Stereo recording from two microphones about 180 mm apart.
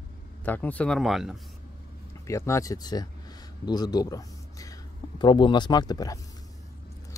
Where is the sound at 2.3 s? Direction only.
15° left (ahead or behind).